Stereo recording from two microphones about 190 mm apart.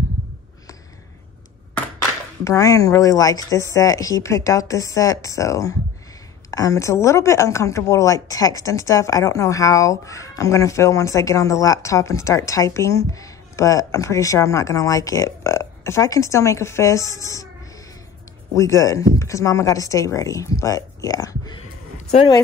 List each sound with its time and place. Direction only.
2.4 s a woman's voice: 15° left (ahead or behind)
18.5 s a woman's voice: 15° left (ahead or behind)